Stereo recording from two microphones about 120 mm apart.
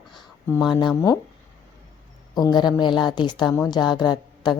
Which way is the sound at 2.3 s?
35° left (ahead or behind).